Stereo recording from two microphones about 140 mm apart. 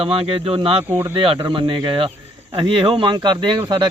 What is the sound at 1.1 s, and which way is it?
Speech, 35° right (ahead or behind).